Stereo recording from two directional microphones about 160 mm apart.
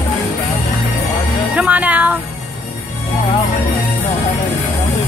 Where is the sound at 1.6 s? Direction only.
10° right (ahead or behind).